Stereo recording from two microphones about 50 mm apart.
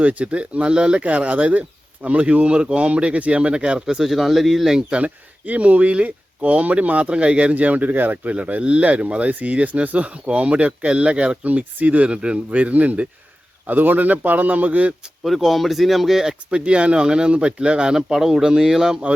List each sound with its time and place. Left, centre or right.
0.0 s speech: right
3.8 s speech: centre
4.9 s a man's voice: right
15.2 s speech: centre
16.5 s speech: right
17.9 s speech: centre